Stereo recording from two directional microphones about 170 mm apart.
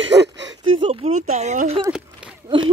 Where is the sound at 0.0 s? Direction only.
90° right.